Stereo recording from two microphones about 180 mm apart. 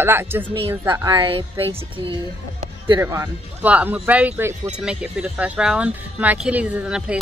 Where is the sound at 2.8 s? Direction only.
20° right (ahead or behind).